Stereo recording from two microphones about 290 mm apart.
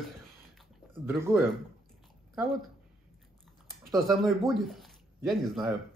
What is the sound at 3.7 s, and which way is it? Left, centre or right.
Speech, centre.